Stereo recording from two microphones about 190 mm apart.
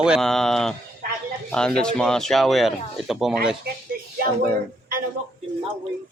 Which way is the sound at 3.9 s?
50° right (ahead or behind).